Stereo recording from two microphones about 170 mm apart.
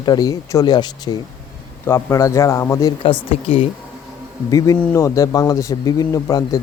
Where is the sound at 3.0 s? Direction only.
30° left (ahead or behind).